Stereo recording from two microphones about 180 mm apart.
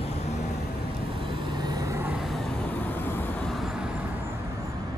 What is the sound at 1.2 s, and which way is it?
Vehicle, 30° right (ahead or behind).